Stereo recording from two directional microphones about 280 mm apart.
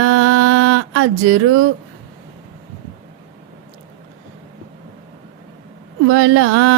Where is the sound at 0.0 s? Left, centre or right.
Right.